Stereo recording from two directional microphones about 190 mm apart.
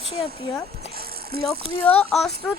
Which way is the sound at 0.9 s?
55° right (ahead or behind).